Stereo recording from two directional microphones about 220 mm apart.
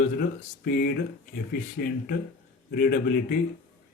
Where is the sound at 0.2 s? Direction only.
45° left (ahead or behind).